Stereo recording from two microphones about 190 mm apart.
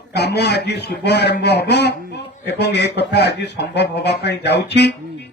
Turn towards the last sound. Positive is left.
turn(degrees=60)  # may be behind; listen again after turning